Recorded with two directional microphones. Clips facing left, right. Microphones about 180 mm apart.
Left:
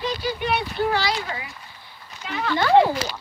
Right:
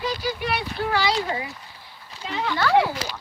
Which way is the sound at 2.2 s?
25° right (ahead or behind).